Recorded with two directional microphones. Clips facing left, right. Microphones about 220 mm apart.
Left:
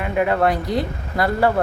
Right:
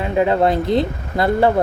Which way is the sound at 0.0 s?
25° right (ahead or behind).